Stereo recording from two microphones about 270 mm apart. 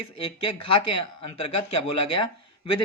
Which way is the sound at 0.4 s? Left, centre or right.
Centre.